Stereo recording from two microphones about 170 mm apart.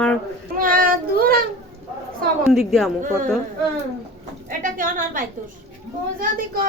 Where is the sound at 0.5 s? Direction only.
55° right (ahead or behind).